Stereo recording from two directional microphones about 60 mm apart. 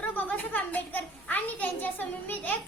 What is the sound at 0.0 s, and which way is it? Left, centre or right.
A child's voice, left.